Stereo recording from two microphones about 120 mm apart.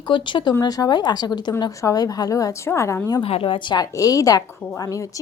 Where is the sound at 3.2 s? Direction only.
50° left (ahead or behind).